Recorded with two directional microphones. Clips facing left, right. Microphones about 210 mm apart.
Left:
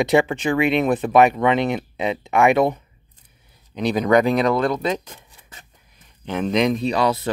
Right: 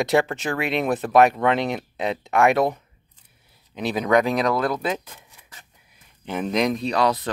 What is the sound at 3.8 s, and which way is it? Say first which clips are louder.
Speech: left 3 dB; centre (ahead or behind).